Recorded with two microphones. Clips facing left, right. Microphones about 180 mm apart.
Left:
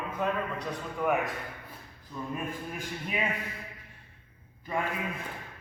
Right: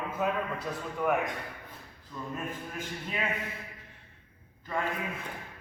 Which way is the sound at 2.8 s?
10° left (ahead or behind).